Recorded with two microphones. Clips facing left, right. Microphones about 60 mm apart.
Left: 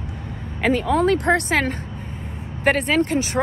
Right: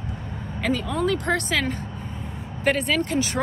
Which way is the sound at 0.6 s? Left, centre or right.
Left.